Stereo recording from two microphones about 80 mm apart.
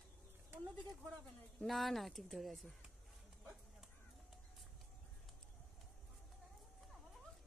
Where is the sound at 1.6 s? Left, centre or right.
Centre.